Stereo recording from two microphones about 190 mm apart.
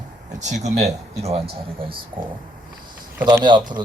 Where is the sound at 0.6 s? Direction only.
35° right (ahead or behind).